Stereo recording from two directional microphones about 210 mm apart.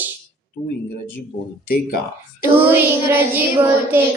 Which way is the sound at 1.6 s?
45° left (ahead or behind).